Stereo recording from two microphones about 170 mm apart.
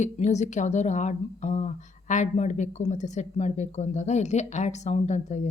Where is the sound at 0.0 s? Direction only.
40° left (ahead or behind).